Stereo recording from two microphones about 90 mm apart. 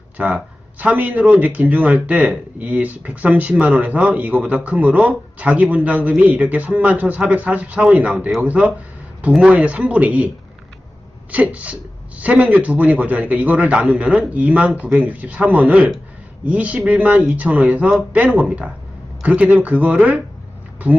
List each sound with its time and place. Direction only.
0.2 s speech: 15° right (ahead or behind)